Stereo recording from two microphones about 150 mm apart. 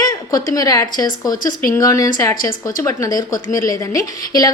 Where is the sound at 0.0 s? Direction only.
25° left (ahead or behind).